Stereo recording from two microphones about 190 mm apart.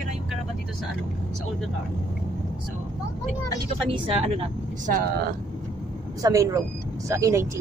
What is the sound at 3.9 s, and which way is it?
Speech, 30° right (ahead or behind).